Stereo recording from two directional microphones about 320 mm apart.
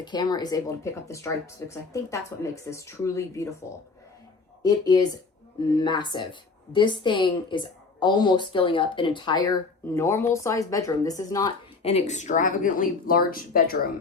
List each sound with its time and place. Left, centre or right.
0.0 s a woman's voice: centre
4.6 s a woman's voice: centre; by 13.9 s left